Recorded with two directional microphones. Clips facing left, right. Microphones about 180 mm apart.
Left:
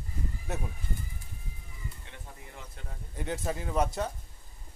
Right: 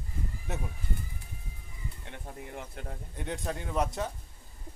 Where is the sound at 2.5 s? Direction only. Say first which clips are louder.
Right 6 dB; 55° right (ahead or behind).